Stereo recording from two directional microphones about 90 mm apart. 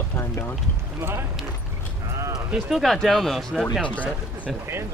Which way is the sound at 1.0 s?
25° right (ahead or behind).